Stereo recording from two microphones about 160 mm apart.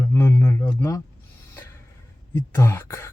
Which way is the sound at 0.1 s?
15° left (ahead or behind).